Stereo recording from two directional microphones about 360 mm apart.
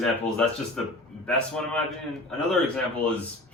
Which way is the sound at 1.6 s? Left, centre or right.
Centre.